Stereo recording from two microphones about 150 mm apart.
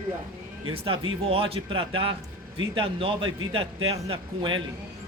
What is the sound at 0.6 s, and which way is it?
Speech, 40° right (ahead or behind).